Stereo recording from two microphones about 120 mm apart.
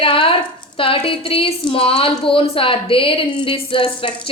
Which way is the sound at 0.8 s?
50° left (ahead or behind).